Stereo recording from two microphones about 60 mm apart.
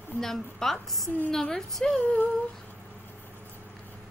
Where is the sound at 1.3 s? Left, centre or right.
Centre.